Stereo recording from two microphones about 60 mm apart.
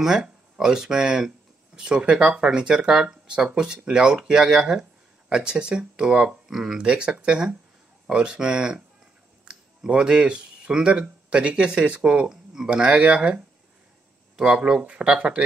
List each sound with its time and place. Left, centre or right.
0.0 s speech: centre